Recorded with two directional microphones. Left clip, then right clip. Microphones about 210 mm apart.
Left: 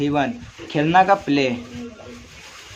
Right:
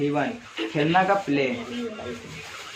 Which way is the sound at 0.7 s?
55° left (ahead or behind).